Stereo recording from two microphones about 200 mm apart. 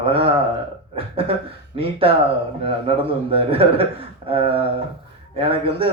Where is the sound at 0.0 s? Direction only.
30° right (ahead or behind).